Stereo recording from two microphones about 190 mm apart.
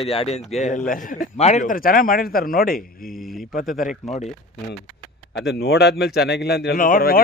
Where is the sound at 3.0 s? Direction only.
Centre (ahead or behind).